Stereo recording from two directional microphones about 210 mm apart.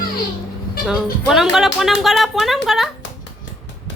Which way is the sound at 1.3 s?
Centre (ahead or behind).